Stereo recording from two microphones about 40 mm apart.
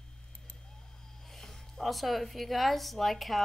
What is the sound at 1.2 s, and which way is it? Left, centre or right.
A woman's voice, centre.